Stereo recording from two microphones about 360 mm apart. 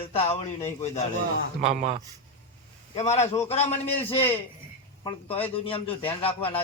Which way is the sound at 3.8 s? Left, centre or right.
Centre.